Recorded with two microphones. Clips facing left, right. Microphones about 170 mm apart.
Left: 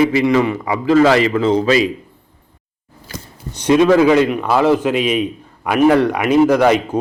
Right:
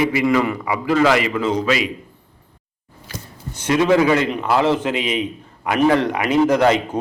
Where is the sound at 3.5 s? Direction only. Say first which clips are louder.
Left 4 dB; 20° left (ahead or behind).